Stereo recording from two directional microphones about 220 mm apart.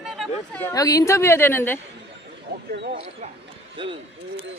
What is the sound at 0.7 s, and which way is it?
A woman's voice, 15° left (ahead or behind).